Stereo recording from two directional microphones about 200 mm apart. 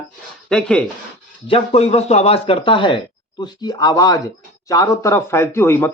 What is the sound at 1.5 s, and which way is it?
A man's voice, 30° left (ahead or behind).